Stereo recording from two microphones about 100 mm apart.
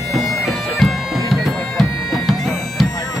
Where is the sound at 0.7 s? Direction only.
Centre (ahead or behind).